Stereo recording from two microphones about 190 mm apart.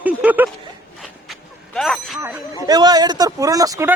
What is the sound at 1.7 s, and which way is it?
Speech, centre (ahead or behind).